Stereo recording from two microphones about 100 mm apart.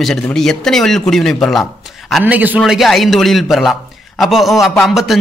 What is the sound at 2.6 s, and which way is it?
A man's voice, centre (ahead or behind).